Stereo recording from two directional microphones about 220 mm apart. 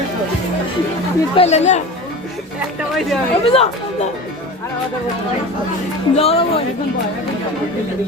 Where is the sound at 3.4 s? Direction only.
25° left (ahead or behind).